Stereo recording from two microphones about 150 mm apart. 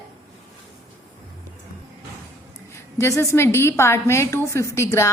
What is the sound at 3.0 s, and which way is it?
A woman's voice, 15° left (ahead or behind).